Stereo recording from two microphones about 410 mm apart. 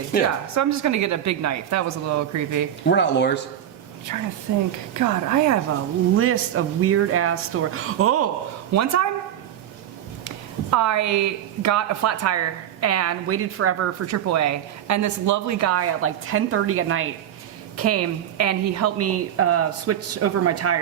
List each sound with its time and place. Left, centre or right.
0.1 s speech: left
0.5 s a woman's voice: right
2.9 s speech: left
4.1 s a woman's voice: right
6.1 s a woman's voice: right
10.2 s a woman's voice: right